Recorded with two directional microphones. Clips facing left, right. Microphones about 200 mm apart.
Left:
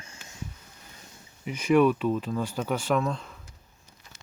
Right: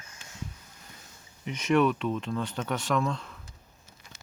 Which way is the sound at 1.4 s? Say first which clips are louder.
Left 3 dB; 5° left (ahead or behind).